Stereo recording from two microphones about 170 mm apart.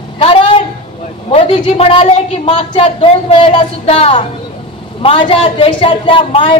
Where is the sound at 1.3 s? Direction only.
35° left (ahead or behind).